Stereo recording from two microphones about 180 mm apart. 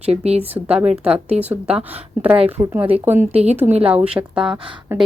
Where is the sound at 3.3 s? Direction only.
35° right (ahead or behind).